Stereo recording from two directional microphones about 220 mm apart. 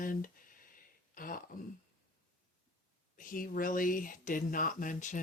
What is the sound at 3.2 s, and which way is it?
Speech, 40° left (ahead or behind).